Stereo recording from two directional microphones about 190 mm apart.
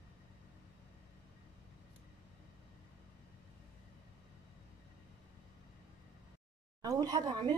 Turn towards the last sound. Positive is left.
turn(degrees=-20)  # may be behind; listen again after turning